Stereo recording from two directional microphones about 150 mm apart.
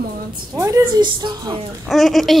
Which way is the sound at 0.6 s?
20° right (ahead or behind).